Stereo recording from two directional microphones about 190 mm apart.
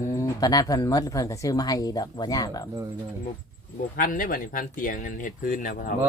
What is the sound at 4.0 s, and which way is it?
Speech, 45° left (ahead or behind).